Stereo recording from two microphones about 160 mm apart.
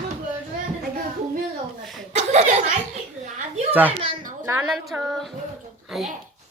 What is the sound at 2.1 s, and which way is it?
Speech, 45° right (ahead or behind).